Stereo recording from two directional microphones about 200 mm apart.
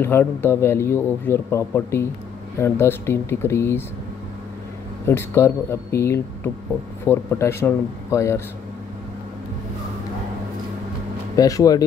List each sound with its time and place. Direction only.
0.0 s a man's voice: 10° left (ahead or behind)
5.0 s a man's voice: 15° left (ahead or behind)
11.3 s a man's voice: 15° left (ahead or behind)